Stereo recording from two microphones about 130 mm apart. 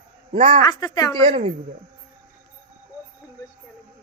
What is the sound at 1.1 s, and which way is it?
Speech, 45° right (ahead or behind).